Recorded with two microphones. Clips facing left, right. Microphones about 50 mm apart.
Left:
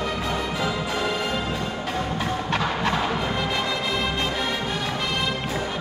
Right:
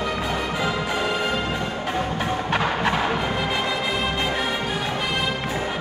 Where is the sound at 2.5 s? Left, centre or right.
Centre.